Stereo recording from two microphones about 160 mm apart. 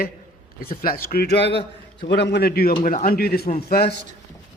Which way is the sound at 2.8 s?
55° left (ahead or behind).